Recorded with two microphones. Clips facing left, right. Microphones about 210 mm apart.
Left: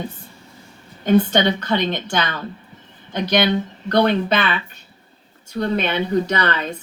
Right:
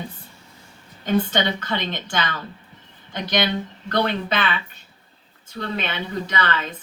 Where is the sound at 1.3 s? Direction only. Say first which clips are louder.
Left 5 dB; 45° left (ahead or behind).